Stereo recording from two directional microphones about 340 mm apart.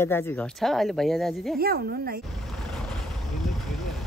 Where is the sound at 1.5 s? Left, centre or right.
Right.